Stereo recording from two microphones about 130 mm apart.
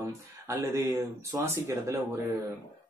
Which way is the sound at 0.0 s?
20° right (ahead or behind).